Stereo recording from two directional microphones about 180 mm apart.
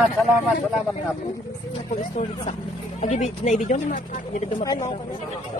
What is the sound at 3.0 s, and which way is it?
Speech, 40° left (ahead or behind).